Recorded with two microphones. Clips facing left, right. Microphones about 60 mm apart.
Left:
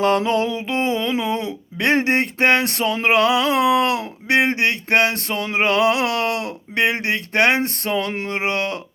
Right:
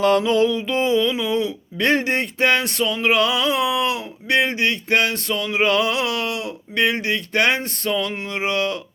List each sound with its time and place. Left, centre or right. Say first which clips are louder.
0.0 s speech: right 1 dB; left
3.1 s speech: left 3 dB; left